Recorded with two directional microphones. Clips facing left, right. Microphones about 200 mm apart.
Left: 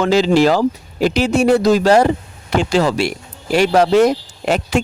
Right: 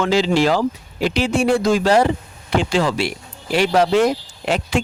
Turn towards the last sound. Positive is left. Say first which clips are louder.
# left 3 dB
turn(degrees=45)  # may be behind; listen again after turning